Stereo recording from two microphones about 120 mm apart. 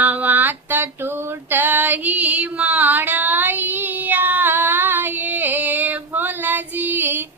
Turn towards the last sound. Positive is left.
turn(degrees=-15)  # may be behind; listen again after turning